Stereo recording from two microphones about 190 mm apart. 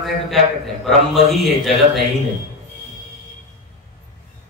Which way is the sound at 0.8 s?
Centre (ahead or behind).